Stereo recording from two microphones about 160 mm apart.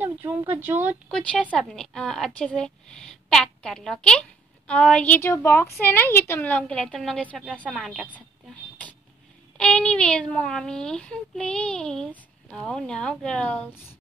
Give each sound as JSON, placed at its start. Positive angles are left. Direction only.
{"t": 0.0, "sound": "speech", "side_deg": -15}
{"t": 1.0, "sound": "speech", "side_deg": 5}
{"t": 9.6, "sound": "speech", "side_deg": 5}